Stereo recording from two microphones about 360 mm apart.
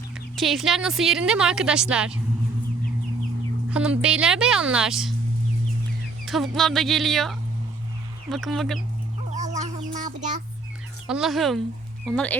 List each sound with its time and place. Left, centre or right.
0.3 s a woman's voice: centre
3.7 s a woman's voice: centre
6.2 s a woman's voice: centre
9.3 s a sound: centre
11.1 s a woman's voice: centre